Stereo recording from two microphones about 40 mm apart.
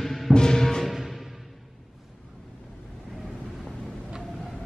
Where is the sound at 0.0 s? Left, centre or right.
Centre.